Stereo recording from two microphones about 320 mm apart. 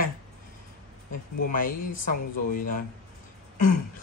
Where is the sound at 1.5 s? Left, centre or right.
Left.